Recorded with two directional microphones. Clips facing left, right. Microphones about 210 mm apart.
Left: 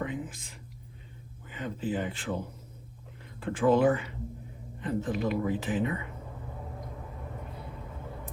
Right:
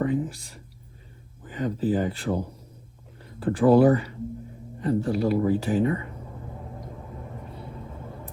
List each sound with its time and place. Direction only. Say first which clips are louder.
0.0 s a sound: right 9 dB; 45° right (ahead or behind)
1.5 s speech: right 8 dB; 45° right (ahead or behind)
3.4 s speech: right 6 dB; 35° right (ahead or behind)